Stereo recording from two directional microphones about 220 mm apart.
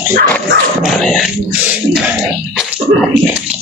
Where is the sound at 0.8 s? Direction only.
Centre (ahead or behind).